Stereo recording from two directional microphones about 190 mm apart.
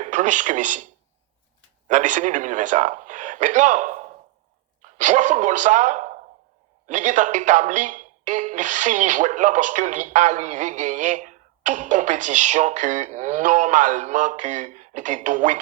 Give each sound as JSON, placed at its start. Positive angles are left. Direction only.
{"t": 0.0, "sound": "speech", "side_deg": -40}
{"t": 1.9, "sound": "a woman's voice", "side_deg": -40}